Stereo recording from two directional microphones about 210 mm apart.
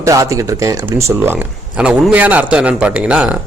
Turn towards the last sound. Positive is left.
turn(degrees=-5)  # may be behind; listen again after turning